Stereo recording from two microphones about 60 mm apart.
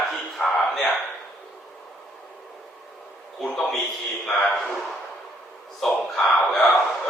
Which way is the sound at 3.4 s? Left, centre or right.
Centre.